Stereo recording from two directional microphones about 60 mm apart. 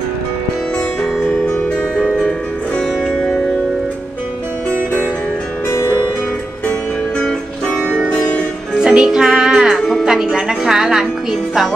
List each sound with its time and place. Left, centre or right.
1.5 s music: centre
2.8 s music: centre
5.7 s music: left
7.6 s music: left
8.7 s music: centre
9.8 s music: centre
10.0 s music: centre